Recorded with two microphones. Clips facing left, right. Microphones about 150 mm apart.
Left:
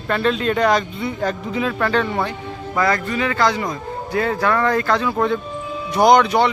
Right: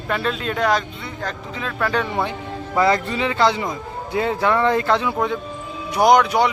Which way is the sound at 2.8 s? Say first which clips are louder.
Right 1 dB; 25° right (ahead or behind).